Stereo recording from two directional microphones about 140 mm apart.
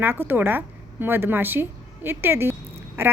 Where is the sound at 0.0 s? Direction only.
15° right (ahead or behind).